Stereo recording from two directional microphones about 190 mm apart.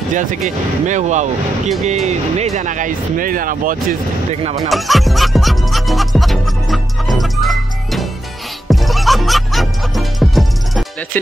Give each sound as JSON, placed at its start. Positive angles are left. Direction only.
{"t": 0.1, "sound": "speech", "side_deg": -45}
{"t": 4.6, "sound": "music", "side_deg": 0}